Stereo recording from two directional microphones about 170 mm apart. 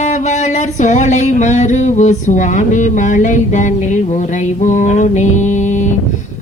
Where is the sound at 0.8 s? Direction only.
45° left (ahead or behind).